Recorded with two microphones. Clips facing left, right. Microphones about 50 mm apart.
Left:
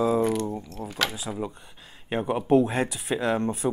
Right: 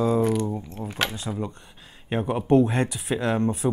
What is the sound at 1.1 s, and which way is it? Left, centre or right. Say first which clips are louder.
Speech: right 1 dB; centre.